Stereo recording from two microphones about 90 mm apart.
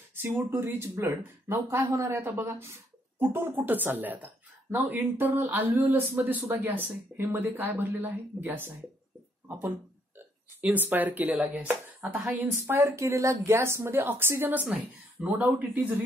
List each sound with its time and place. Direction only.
0.1 s speech: 30° right (ahead or behind)
2.2 s speech: 20° right (ahead or behind)
11.3 s speech: 10° right (ahead or behind)
12.6 s speech: 30° right (ahead or behind)